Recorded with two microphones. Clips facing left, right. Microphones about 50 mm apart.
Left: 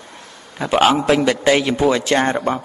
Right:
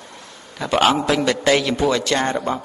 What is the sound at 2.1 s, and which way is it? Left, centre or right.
Speech, left.